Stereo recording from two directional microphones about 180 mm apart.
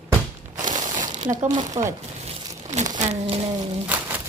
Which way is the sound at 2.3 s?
35° right (ahead or behind).